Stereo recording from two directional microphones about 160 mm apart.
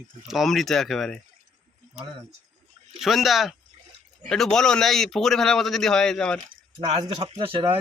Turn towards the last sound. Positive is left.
turn(degrees=-30)  # may be behind; listen again after turning